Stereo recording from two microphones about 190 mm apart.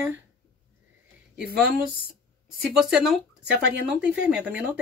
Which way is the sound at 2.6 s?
5° right (ahead or behind).